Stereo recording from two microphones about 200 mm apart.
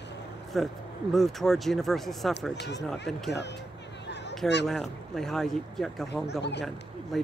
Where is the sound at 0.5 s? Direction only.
Centre (ahead or behind).